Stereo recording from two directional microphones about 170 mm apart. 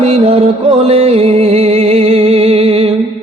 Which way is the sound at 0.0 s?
35° right (ahead or behind).